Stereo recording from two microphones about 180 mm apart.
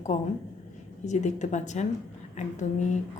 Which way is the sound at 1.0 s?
40° left (ahead or behind).